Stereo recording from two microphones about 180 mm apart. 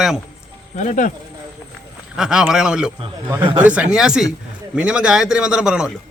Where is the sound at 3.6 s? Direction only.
5° right (ahead or behind).